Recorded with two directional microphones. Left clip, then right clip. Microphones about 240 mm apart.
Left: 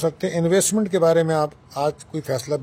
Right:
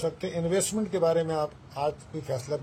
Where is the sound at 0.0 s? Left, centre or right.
Left.